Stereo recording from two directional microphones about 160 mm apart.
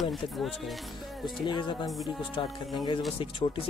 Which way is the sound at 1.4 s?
30° left (ahead or behind).